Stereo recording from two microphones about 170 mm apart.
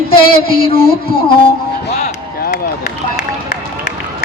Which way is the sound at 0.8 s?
60° left (ahead or behind).